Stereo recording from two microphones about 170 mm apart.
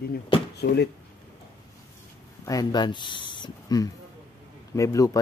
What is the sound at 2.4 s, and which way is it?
A man's voice, 25° left (ahead or behind).